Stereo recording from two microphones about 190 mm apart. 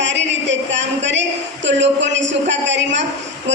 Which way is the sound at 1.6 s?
70° right (ahead or behind).